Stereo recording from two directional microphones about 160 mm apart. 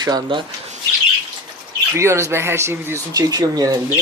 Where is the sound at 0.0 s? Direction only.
30° right (ahead or behind).